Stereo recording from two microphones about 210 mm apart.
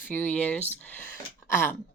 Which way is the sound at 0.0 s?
10° left (ahead or behind).